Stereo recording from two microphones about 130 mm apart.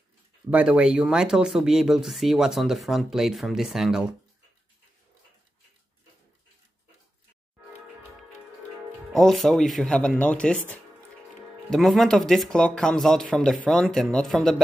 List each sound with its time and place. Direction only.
0.5 s speech: 10° right (ahead or behind)
9.1 s speech: centre (ahead or behind)